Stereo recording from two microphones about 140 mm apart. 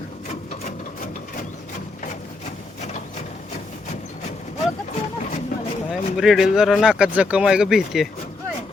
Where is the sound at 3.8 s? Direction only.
55° left (ahead or behind).